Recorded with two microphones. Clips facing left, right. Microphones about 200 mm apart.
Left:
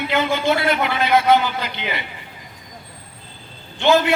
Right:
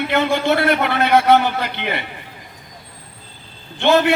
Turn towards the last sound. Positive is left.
turn(degrees=-60)  # may be behind; listen again after turning